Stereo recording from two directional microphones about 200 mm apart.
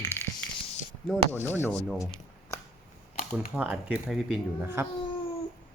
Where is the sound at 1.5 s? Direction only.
10° left (ahead or behind).